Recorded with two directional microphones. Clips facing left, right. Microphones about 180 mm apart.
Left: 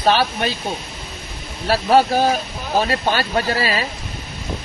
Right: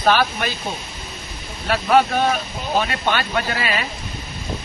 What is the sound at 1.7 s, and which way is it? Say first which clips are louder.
Speech: left 2 dB; 35° left (ahead or behind).